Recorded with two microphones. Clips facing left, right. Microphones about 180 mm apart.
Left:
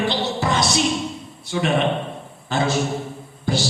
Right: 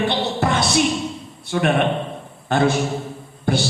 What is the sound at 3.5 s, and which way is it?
Music, 55° right (ahead or behind).